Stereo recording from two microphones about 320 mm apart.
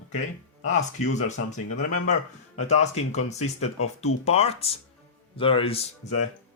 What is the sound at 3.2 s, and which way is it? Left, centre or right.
Speech, left.